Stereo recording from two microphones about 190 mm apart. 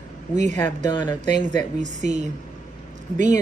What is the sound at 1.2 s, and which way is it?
A woman's voice, 40° right (ahead or behind).